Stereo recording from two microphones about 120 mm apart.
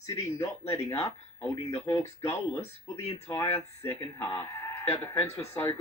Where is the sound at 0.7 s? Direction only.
25° left (ahead or behind).